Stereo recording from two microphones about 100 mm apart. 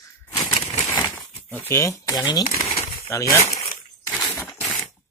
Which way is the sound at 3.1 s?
30° left (ahead or behind).